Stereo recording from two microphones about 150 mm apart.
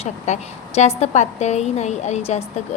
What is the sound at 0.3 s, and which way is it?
A woman's voice, 50° left (ahead or behind).